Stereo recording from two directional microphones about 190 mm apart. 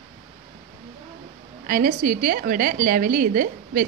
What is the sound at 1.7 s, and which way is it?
A woman's voice, 45° right (ahead or behind).